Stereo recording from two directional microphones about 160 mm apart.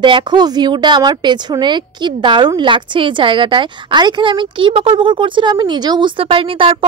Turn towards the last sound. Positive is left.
turn(degrees=-35)  # may be behind; listen again after turning